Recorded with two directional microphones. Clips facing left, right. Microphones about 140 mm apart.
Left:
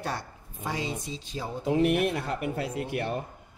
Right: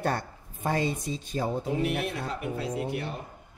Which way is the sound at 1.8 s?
55° left (ahead or behind).